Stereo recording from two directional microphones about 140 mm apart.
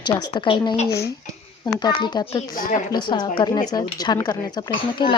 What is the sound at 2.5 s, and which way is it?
Speech, 90° left.